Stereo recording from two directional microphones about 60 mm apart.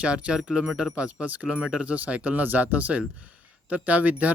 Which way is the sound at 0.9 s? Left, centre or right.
Right.